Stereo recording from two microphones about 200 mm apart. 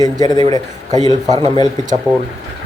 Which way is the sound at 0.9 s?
20° right (ahead or behind).